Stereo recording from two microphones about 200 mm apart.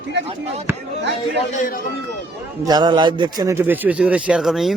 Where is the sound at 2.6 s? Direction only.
20° right (ahead or behind); by 4.7 s centre (ahead or behind).